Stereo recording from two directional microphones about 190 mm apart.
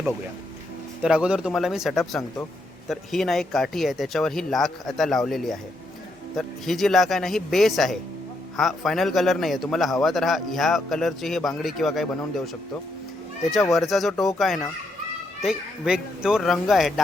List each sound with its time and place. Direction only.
1.0 s a man's voice: 5° right (ahead or behind)
13.5 s a man's voice: centre (ahead or behind)